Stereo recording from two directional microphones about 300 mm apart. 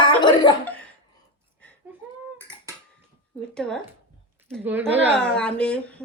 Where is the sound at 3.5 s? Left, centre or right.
Centre.